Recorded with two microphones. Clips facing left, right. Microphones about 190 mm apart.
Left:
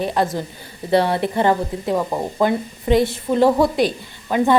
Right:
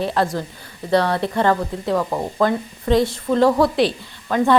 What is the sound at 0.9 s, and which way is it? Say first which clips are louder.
A woman's voice: left 1 dB; 25° left (ahead or behind).